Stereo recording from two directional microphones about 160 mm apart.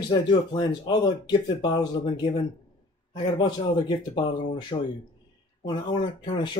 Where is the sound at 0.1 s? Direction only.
25° left (ahead or behind).